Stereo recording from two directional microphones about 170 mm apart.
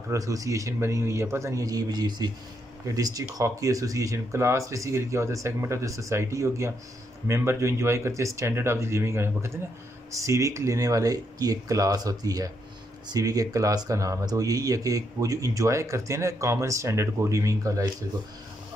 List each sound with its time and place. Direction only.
0.1 s speech: 20° right (ahead or behind)